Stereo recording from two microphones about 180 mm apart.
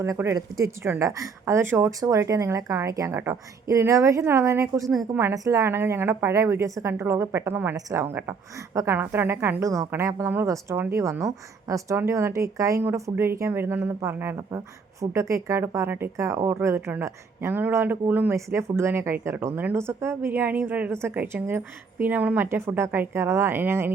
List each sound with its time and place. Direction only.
0.0 s speech: 15° right (ahead or behind)